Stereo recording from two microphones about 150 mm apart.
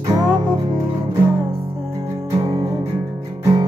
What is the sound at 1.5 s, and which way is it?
Music, 35° right (ahead or behind).